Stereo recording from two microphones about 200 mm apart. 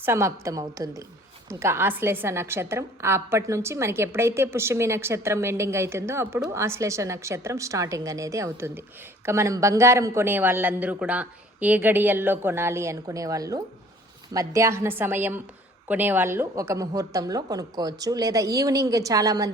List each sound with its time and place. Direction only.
0.0 s a woman's voice: 15° right (ahead or behind)